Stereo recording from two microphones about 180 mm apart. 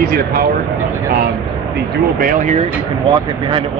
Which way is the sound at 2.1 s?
50° right (ahead or behind).